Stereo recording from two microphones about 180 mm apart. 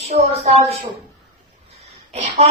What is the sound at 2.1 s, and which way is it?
Speech, 35° right (ahead or behind).